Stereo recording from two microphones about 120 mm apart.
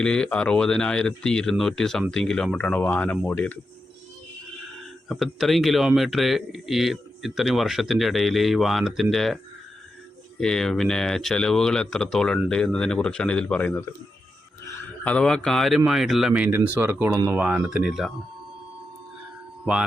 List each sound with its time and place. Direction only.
0.0 s speech: 5° left (ahead or behind)
5.0 s speech: centre (ahead or behind)
10.4 s speech: 5° left (ahead or behind)
15.0 s speech: 5° left (ahead or behind); by 16.6 s 10° right (ahead or behind)
16.8 s speech: 20° right (ahead or behind)
17.3 s speech: 10° right (ahead or behind)